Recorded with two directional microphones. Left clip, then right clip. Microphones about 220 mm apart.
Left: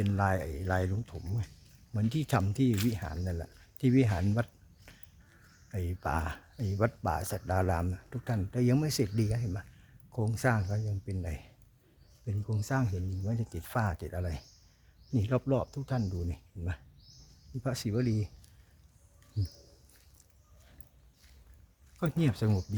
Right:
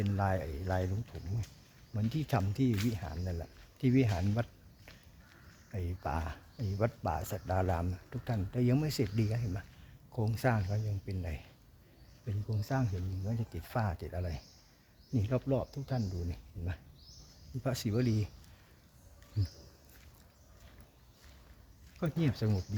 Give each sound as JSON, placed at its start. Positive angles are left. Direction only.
{"t": 0.0, "sound": "speech", "side_deg": 15}
{"t": 5.7, "sound": "speech", "side_deg": 15}
{"t": 17.6, "sound": "speech", "side_deg": 0}
{"t": 22.0, "sound": "speech", "side_deg": 15}